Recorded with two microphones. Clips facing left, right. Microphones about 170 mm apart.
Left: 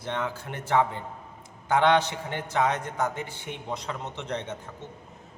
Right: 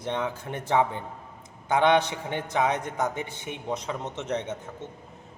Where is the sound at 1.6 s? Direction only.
15° right (ahead or behind).